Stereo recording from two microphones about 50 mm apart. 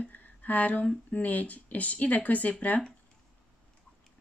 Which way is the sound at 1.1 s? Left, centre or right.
Left.